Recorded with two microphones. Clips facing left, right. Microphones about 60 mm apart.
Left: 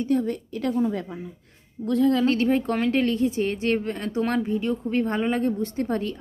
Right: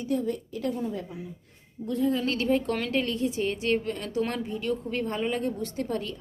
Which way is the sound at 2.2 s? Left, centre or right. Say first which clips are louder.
Left 4 dB; left.